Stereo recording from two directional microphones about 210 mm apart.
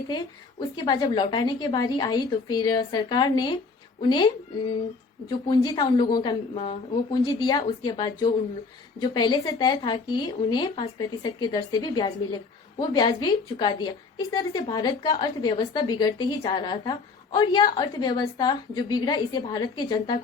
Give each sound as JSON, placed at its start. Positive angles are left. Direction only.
{"t": 0.9, "sound": "speech", "side_deg": 20}
{"t": 5.3, "sound": "speech", "side_deg": 20}